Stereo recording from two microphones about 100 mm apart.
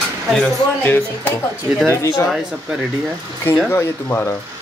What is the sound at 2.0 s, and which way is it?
Speech, 30° left (ahead or behind).